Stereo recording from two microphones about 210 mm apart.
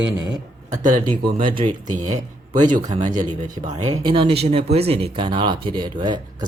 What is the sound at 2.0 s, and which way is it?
Speech, 35° right (ahead or behind).